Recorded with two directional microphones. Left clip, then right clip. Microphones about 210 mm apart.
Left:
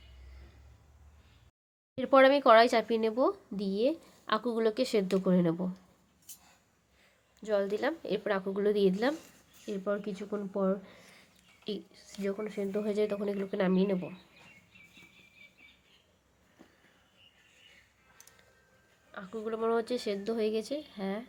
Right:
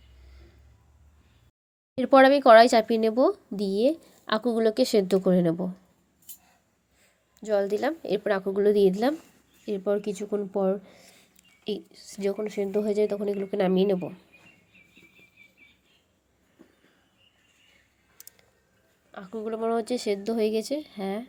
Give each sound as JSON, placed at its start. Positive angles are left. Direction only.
{"t": 2.0, "sound": "speech", "side_deg": -20}
{"t": 7.0, "sound": "a woman's voice", "side_deg": -15}
{"t": 18.2, "sound": "music", "side_deg": -15}
{"t": 19.1, "sound": "a woman's voice", "side_deg": -15}